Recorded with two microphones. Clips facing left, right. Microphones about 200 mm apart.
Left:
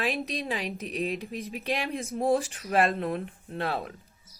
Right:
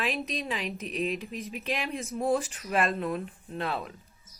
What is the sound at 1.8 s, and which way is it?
Speech, 55° left (ahead or behind).